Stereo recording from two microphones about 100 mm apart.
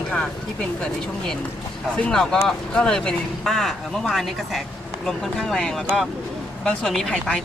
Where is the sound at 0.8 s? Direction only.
5° left (ahead or behind).